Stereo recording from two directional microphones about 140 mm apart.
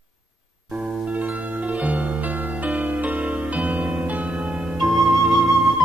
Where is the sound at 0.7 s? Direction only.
5° right (ahead or behind).